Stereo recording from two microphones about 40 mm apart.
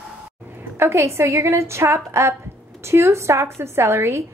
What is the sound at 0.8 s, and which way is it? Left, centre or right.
Speech, right.